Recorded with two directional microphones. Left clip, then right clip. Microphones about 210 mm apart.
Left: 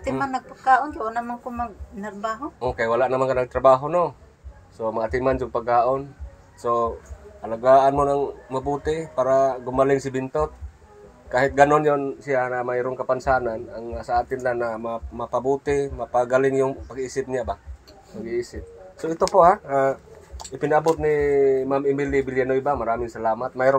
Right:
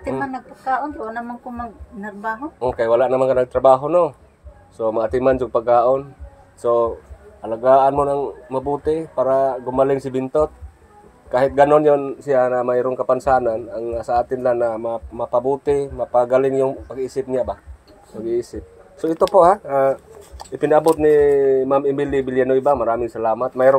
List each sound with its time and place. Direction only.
0.2 s a woman's voice: 35° left (ahead or behind)
2.6 s a man's voice: 15° right (ahead or behind)